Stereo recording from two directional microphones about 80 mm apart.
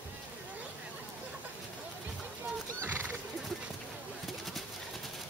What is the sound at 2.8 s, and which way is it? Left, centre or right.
Horse, right.